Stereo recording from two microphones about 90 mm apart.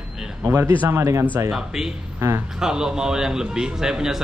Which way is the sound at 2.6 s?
5° right (ahead or behind).